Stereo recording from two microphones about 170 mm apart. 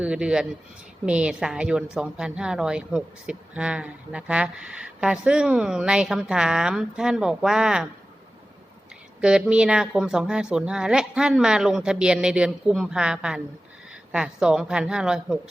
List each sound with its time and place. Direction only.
0.0 s a woman's voice: 5° right (ahead or behind)
9.2 s a woman's voice: 5° right (ahead or behind)